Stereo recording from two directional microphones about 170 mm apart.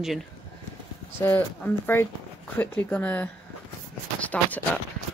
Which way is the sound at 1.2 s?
10° left (ahead or behind).